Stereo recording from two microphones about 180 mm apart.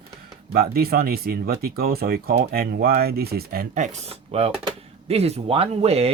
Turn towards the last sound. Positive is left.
turn(degrees=-35)  # may be behind; listen again after turning